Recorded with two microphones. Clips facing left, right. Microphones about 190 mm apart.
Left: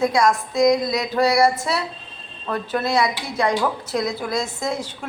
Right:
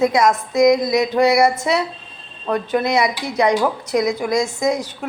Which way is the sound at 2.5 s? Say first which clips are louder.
Right 4 dB; 15° right (ahead or behind).